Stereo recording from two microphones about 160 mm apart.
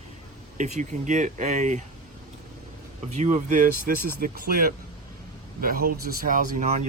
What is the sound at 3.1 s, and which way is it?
Speech, 50° right (ahead or behind).